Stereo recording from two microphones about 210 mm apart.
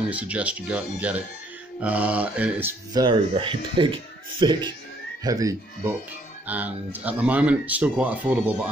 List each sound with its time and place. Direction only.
0.1 s speech: 5° right (ahead or behind)
2.9 s speech: 20° right (ahead or behind)